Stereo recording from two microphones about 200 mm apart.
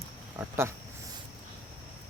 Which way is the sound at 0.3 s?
10° right (ahead or behind).